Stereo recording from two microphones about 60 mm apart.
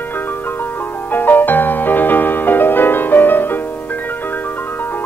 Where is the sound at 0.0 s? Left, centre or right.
Left.